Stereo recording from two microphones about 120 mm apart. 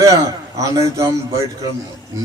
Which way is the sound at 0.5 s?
25° right (ahead or behind).